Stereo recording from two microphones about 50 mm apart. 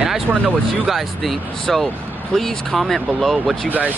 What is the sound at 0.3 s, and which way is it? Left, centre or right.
Speech, centre.